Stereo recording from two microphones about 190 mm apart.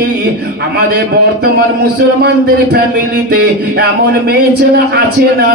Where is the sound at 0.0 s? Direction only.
55° right (ahead or behind).